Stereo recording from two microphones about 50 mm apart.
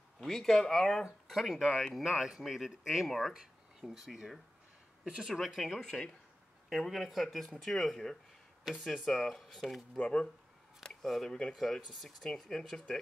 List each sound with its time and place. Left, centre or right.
0.2 s speech: centre
5.8 s speech: centre
9.9 s speech: centre
10.8 s a sound: centre
11.2 s speech: centre